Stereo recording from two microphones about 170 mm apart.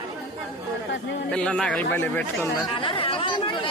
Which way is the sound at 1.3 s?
5° left (ahead or behind).